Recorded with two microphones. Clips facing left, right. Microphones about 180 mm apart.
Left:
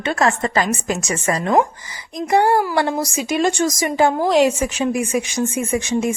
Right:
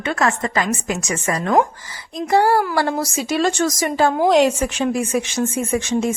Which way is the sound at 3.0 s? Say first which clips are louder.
Left 1 dB; 15° left (ahead or behind).